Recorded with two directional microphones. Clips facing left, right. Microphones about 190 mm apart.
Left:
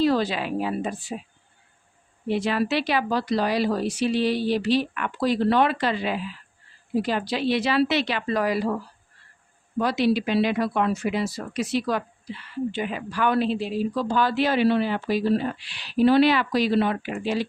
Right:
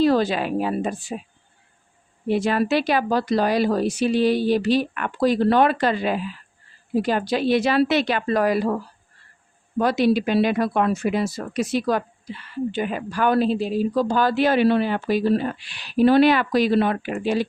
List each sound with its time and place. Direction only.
0.0 s a woman's voice: 45° right (ahead or behind)
2.2 s speech: 50° right (ahead or behind)